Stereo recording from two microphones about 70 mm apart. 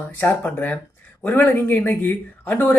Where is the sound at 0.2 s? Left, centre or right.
Left.